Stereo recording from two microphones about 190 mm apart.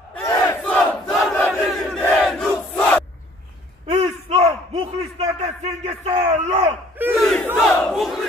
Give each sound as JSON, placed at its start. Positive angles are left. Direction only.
{"t": 0.2, "sound": "crowd", "side_deg": 15}
{"t": 3.8, "sound": "a sound", "side_deg": -30}
{"t": 7.2, "sound": "crowd", "side_deg": 0}
{"t": 7.4, "sound": "battle cry", "side_deg": 0}